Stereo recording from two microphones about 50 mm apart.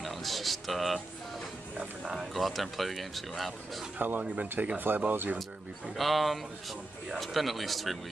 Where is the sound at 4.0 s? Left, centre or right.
Right.